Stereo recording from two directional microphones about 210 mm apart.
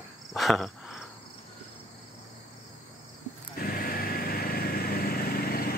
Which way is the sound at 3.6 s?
45° left (ahead or behind).